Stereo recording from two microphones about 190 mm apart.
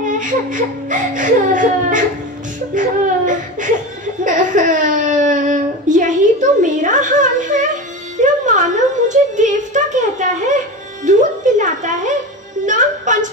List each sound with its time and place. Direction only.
0.0 s speech: 45° right (ahead or behind)
4.2 s a sound: 45° right (ahead or behind)
11.1 s speech: 40° right (ahead or behind)
12.6 s music: 40° right (ahead or behind)